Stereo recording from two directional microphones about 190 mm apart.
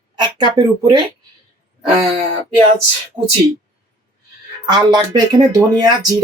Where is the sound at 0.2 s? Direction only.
20° right (ahead or behind).